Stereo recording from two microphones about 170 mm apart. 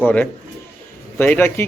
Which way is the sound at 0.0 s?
10° left (ahead or behind).